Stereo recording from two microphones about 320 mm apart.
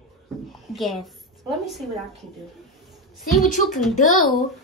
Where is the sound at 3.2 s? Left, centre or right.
Centre.